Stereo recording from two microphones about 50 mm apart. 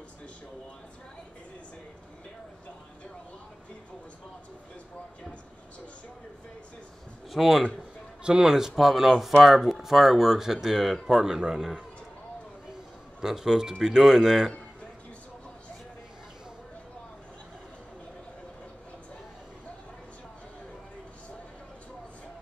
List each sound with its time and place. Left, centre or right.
7.2 s speech: centre
8.2 s speech: centre
13.2 s speech: centre